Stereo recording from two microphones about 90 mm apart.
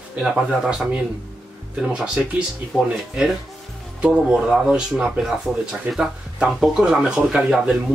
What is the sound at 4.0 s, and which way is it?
Speech, 5° right (ahead or behind).